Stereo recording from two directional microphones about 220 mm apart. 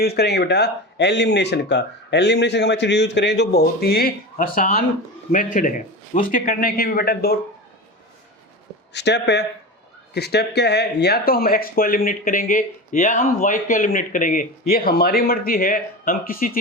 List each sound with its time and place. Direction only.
0.0 s speech: 45° left (ahead or behind)
8.9 s speech: 50° left (ahead or behind)